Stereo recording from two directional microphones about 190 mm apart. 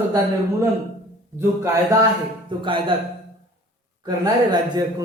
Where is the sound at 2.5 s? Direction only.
25° right (ahead or behind).